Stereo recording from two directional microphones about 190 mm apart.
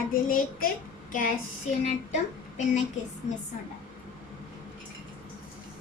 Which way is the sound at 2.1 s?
40° left (ahead or behind).